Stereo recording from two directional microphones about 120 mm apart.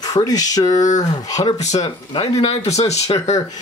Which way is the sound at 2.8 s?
30° left (ahead or behind).